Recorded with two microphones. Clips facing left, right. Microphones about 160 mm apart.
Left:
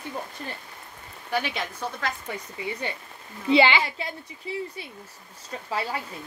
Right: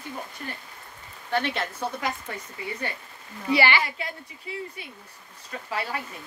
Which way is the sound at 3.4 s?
20° left (ahead or behind).